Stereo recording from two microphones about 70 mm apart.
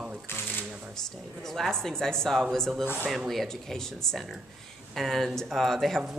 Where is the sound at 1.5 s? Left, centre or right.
Centre.